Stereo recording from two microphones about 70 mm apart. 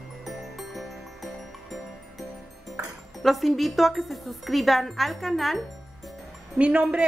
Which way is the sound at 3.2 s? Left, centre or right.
Centre.